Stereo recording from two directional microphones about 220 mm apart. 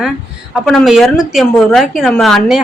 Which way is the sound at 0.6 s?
Centre (ahead or behind).